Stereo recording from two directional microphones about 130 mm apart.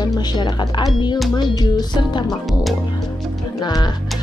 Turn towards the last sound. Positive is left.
turn(degrees=35)  # may be behind; listen again after turning